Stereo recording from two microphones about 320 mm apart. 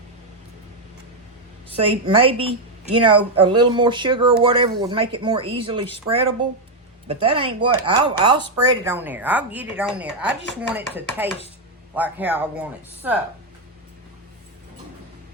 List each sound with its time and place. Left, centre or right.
1.7 s a woman's voice: centre